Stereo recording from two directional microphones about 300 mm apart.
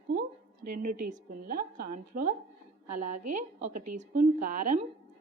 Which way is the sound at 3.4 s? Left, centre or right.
Right.